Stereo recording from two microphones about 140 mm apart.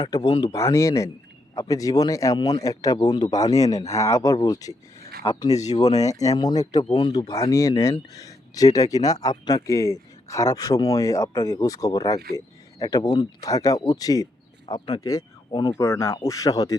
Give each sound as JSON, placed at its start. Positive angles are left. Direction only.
{"t": 0.0, "sound": "speech", "side_deg": 30}